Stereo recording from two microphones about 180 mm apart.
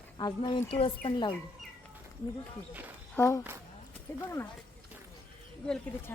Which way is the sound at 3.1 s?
10° left (ahead or behind).